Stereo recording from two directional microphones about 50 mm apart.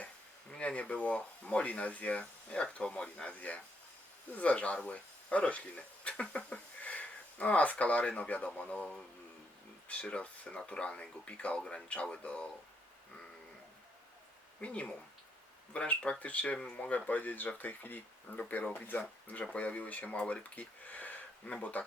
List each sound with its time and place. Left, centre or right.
0.5 s speech: left
10.1 s speech: left
14.6 s speech: left